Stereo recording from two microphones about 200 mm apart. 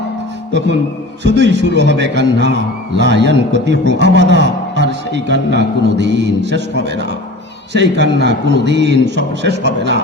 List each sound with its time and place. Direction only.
1.2 s a man's voice: 60° right (ahead or behind)